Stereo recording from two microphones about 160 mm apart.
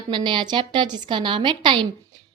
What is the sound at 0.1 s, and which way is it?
A woman's voice, 30° right (ahead or behind).